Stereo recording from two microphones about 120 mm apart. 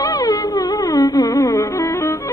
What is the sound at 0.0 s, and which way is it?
Music, 30° left (ahead or behind).